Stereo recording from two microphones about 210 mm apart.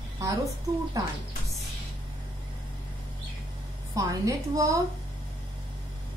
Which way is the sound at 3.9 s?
15° right (ahead or behind).